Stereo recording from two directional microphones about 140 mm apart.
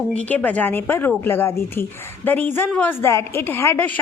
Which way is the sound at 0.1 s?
10° left (ahead or behind).